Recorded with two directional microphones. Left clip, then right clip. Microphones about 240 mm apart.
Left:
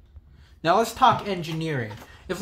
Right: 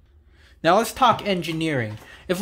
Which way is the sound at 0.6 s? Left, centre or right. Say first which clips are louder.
Right 2 dB; right.